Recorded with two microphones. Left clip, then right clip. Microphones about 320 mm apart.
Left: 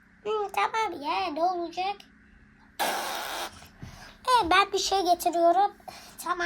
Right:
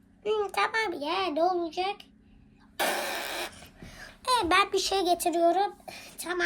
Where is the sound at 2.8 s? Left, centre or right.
Centre.